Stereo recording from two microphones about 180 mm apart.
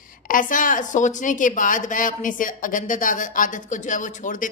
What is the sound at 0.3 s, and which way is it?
A woman's voice, 45° left (ahead or behind).